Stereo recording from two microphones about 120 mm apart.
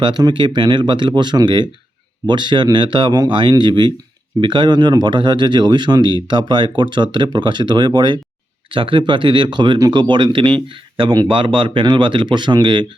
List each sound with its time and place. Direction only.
0.0 s speech: 35° right (ahead or behind)